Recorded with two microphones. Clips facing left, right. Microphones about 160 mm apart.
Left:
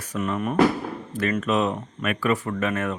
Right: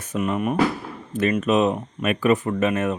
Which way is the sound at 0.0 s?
20° right (ahead or behind).